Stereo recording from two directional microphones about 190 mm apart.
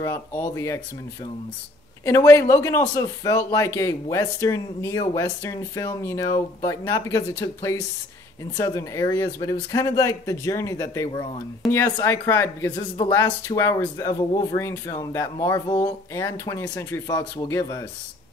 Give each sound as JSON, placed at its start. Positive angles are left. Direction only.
{"t": 0.0, "sound": "speech", "side_deg": 15}
{"t": 2.0, "sound": "speech", "side_deg": 15}